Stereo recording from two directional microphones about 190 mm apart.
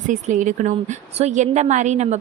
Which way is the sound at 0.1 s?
40° right (ahead or behind).